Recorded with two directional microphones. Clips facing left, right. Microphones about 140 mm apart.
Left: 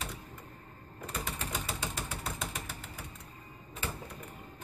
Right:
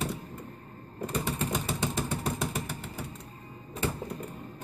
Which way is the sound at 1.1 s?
25° right (ahead or behind).